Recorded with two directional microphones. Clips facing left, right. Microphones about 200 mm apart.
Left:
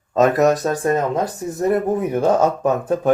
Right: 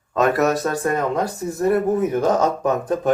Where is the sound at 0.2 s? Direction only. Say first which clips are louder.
Left 3 dB; 20° left (ahead or behind).